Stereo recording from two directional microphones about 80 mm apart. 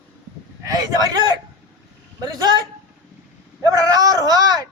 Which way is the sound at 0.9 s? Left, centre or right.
Right.